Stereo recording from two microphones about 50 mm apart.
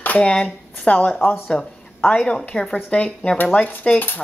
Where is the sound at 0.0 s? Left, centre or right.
Left.